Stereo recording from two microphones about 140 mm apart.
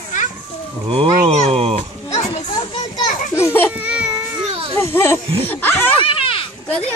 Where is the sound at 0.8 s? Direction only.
40° right (ahead or behind).